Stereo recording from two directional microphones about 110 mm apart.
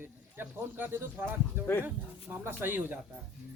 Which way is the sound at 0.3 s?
20° right (ahead or behind).